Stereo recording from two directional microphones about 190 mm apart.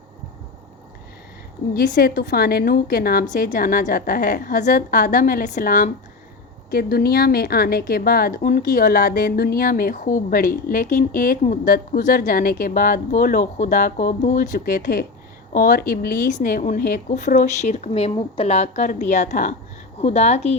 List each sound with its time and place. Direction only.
1.7 s speech: 50° left (ahead or behind)